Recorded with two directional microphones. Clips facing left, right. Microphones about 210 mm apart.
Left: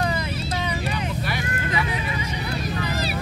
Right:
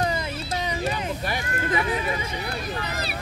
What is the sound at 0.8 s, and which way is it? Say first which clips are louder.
Vehicle: even; 40° right (ahead or behind).